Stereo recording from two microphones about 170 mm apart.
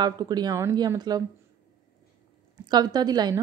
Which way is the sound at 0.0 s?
25° right (ahead or behind).